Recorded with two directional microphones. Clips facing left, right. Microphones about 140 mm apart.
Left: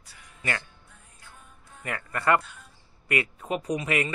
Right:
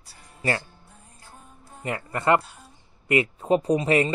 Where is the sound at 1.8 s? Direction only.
25° right (ahead or behind).